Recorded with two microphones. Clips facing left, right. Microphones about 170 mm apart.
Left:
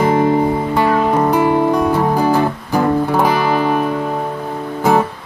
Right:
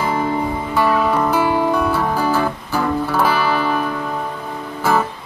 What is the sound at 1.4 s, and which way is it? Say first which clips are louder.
Music: left 4 dB; 35° left (ahead or behind).